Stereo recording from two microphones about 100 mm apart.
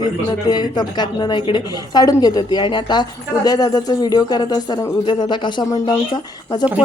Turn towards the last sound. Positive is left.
turn(degrees=50)  # may be behind; listen again after turning